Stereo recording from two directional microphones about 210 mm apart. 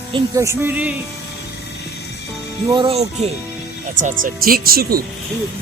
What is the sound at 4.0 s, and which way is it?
Speech, 40° right (ahead or behind).